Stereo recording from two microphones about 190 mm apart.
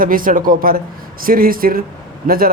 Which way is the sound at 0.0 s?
45° right (ahead or behind).